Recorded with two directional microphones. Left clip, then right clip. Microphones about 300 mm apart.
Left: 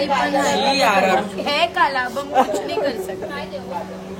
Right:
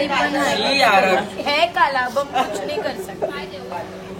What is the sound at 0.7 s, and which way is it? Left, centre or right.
A woman's voice, centre.